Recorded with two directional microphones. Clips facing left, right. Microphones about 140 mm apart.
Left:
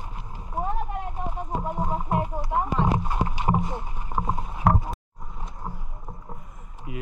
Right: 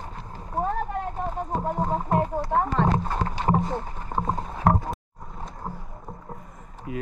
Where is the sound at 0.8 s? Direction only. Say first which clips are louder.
Right 3 dB; 35° right (ahead or behind).